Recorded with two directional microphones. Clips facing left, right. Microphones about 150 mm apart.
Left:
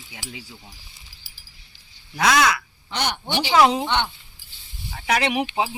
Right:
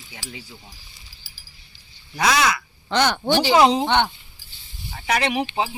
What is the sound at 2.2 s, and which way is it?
Speech, centre (ahead or behind).